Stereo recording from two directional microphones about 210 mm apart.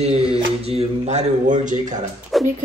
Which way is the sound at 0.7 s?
30° right (ahead or behind).